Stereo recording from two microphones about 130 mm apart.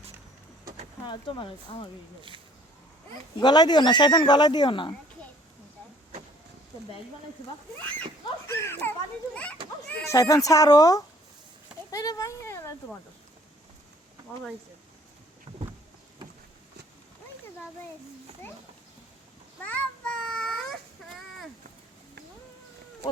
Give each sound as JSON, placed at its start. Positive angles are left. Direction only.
{"t": 1.0, "sound": "speech", "side_deg": 40}
{"t": 3.4, "sound": "speech", "side_deg": 35}
{"t": 8.4, "sound": "a child's voice", "side_deg": 20}
{"t": 9.9, "sound": "speech", "side_deg": 20}
{"t": 15.5, "sound": "boat", "side_deg": -45}
{"t": 19.6, "sound": "child singing", "side_deg": 10}